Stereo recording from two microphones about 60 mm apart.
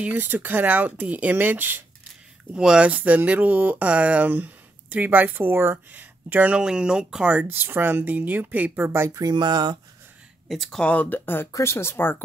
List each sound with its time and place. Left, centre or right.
0.0 s speech: right
2.5 s speech: centre
2.9 s speech: right
5.9 s speech: right
6.5 s speech: centre
7.2 s speech: right
8.7 s speech: right
10.5 s speech: centre
10.8 s speech: left